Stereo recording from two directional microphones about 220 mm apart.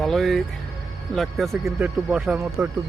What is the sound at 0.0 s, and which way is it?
Speech, centre (ahead or behind).